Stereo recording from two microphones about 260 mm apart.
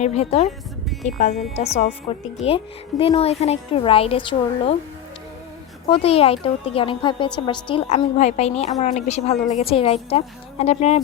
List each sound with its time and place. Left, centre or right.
0.0 s a woman's voice: left
5.9 s a woman's voice: left